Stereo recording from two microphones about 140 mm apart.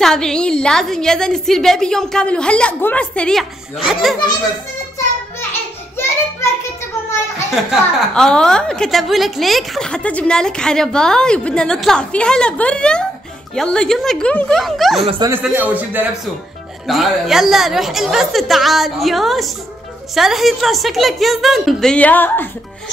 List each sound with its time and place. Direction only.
0.0 s a woman's voice: 5° left (ahead or behind)
5.5 s a sound: 15° left (ahead or behind)
8.1 s a woman's voice: 5° left (ahead or behind)
15.4 s a man's voice: 10° right (ahead or behind)
16.8 s a woman's voice: centre (ahead or behind); by 22.5 s 15° left (ahead or behind)